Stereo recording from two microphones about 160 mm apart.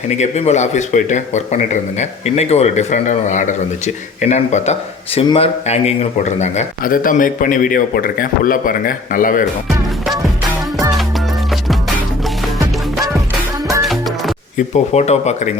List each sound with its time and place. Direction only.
0.2 s speech: 45° left (ahead or behind)
13.8 s music: centre (ahead or behind)
14.7 s speech: 45° left (ahead or behind)